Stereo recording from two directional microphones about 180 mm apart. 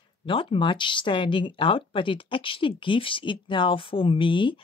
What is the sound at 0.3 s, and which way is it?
Speech, 30° left (ahead or behind).